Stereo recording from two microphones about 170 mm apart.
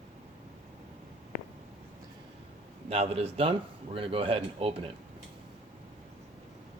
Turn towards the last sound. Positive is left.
turn(degrees=-35)  # may be behind; listen again after turning